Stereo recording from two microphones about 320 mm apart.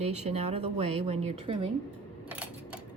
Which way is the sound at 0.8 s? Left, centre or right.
Right.